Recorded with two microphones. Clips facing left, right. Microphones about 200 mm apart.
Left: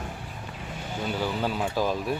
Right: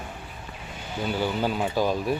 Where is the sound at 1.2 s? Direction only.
Centre (ahead or behind).